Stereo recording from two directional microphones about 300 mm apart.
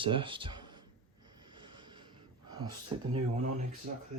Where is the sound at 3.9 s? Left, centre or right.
Right.